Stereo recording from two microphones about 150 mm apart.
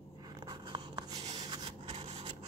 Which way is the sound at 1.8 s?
50° right (ahead or behind).